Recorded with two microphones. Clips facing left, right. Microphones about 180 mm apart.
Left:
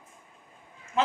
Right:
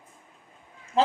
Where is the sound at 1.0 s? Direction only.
30° right (ahead or behind).